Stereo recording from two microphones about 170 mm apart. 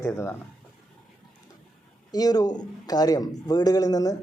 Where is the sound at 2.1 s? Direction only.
20° left (ahead or behind).